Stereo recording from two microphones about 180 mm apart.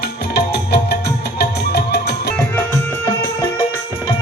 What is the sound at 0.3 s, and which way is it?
Music, 65° left (ahead or behind).